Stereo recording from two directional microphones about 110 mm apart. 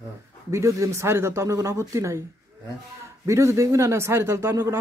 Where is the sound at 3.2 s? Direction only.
25° right (ahead or behind).